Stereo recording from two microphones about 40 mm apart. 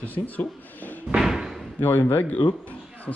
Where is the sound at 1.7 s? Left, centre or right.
Left.